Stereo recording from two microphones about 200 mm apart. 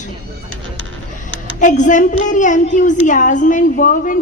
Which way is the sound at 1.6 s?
40° left (ahead or behind).